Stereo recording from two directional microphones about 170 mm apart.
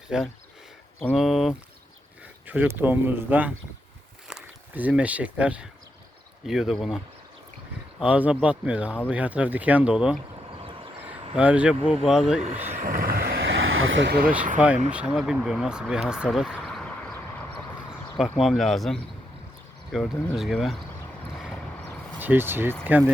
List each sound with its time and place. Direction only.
0.1 s speech: 5° right (ahead or behind)
10.5 s vehicle: 30° right (ahead or behind)
11.0 s speech: 10° right (ahead or behind)
12.7 s vehicle: 55° right (ahead or behind); by 14.2 s 90° right
14.2 s speech: 5° right (ahead or behind)
18.3 s speech: centre (ahead or behind)
22.2 s speech: 10° right (ahead or behind)